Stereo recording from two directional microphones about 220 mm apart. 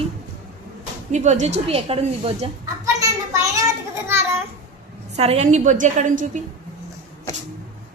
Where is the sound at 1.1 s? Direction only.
35° right (ahead or behind).